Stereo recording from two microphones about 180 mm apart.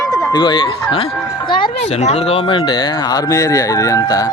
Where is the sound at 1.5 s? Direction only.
25° left (ahead or behind).